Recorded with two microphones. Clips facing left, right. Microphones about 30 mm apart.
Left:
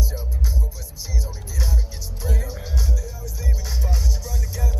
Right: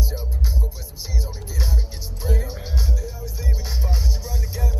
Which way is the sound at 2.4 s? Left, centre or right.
Right.